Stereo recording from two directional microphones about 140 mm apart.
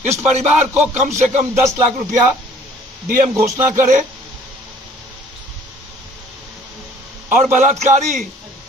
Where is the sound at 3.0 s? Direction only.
70° right (ahead or behind).